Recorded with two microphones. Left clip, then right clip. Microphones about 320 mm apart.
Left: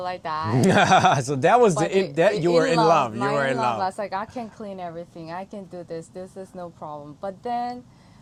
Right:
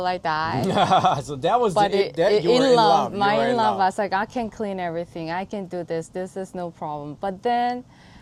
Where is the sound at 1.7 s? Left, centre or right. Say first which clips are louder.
Right 3 dB; right.